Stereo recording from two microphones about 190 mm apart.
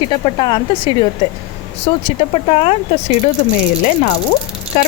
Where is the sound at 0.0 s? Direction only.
25° left (ahead or behind).